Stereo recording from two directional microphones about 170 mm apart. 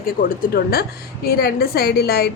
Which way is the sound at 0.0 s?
55° left (ahead or behind).